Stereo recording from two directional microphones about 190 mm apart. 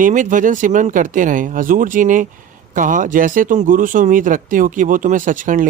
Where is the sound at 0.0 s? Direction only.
45° right (ahead or behind).